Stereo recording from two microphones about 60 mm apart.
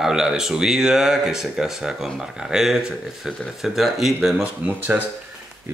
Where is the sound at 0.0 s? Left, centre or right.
Centre.